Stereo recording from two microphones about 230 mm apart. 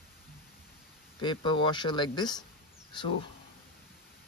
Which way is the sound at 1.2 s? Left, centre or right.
Centre.